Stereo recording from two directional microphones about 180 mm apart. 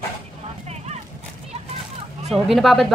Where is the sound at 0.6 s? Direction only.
35° right (ahead or behind).